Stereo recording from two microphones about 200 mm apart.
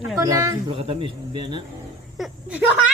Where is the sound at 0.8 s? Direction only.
25° right (ahead or behind).